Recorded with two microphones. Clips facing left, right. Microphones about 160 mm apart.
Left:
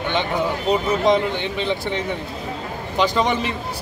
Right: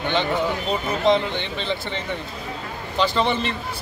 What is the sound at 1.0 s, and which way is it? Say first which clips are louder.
A man's voice: left 2 dB; 10° left (ahead or behind).